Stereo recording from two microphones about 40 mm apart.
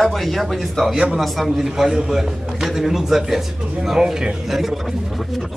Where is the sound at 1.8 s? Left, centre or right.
Centre.